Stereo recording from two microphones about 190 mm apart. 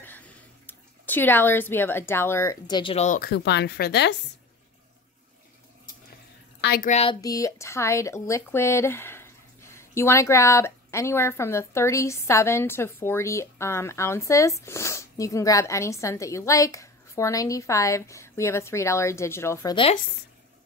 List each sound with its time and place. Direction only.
0.7 s speech: 10° left (ahead or behind); by 3.1 s 25° left (ahead or behind)
3.1 s speech: 55° left (ahead or behind)
6.6 s a woman's voice: 55° left (ahead or behind)
6.9 s speech: 30° left (ahead or behind)
7.2 s speech: 20° left (ahead or behind)
19.7 s speech: 30° left (ahead or behind)